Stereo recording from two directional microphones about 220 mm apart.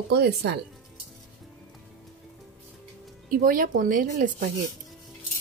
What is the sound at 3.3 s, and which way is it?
Speech, 40° right (ahead or behind).